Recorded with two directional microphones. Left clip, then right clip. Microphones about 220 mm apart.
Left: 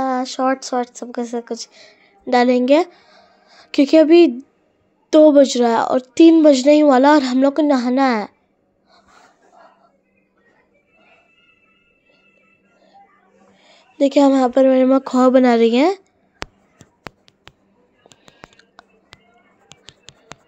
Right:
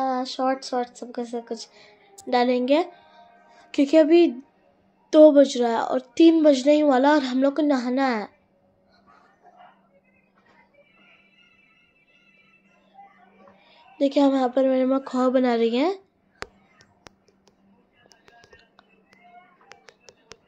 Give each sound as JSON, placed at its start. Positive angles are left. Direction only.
{"t": 0.0, "sound": "speech", "side_deg": 45}
{"t": 13.6, "sound": "speech", "side_deg": 35}